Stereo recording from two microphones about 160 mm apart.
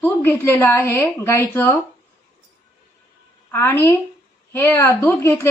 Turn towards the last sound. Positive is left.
turn(degrees=15)  # may be behind; listen again after turning